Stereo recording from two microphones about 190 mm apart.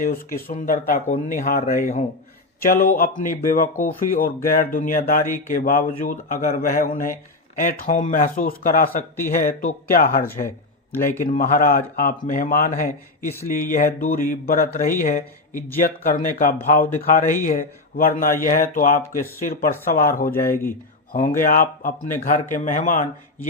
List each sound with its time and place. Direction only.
0.0 s speech: 50° left (ahead or behind)
20.5 s speech: 10° left (ahead or behind)
21.4 s speech: 45° left (ahead or behind)